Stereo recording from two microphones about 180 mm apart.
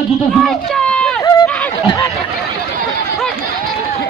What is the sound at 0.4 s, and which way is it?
Children playing, centre (ahead or behind).